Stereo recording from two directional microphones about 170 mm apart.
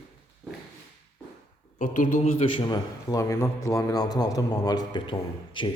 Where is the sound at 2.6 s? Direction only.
25° left (ahead or behind).